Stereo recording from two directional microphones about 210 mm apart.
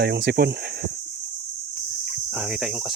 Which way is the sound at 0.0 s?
50° right (ahead or behind).